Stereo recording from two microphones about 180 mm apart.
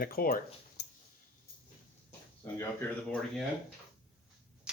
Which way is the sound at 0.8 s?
65° left (ahead or behind).